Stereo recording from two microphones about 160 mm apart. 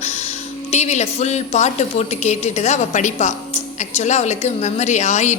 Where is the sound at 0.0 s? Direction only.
40° left (ahead or behind).